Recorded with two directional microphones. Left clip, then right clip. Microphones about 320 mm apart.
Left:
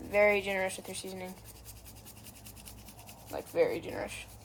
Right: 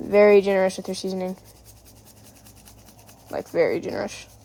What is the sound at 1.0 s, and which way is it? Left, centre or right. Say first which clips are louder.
Speech: right 18 dB; right.